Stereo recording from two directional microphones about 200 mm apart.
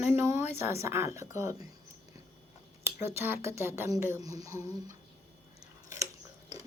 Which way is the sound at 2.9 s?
15° right (ahead or behind).